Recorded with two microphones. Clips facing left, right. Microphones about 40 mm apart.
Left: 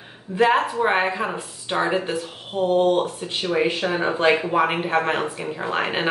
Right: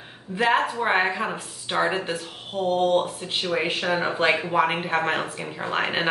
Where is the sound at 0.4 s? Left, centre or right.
Centre.